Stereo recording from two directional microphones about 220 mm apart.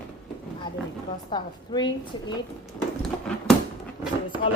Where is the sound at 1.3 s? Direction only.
20° left (ahead or behind).